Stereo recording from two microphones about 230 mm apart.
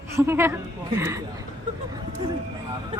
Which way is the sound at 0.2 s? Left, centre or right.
Centre.